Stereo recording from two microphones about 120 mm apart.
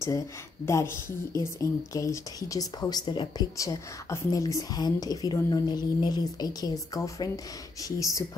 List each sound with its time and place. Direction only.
0.7 s speech: 20° left (ahead or behind)